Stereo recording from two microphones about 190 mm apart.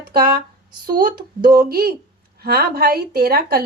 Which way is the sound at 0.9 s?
50° right (ahead or behind).